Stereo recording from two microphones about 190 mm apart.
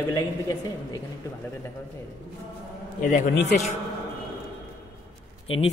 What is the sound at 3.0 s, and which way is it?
Speech, 45° left (ahead or behind).